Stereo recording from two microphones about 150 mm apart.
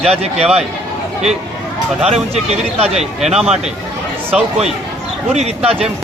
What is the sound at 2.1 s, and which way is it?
Speech, 45° right (ahead or behind).